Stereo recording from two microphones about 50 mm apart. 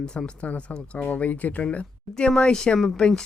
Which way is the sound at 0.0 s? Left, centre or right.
Centre.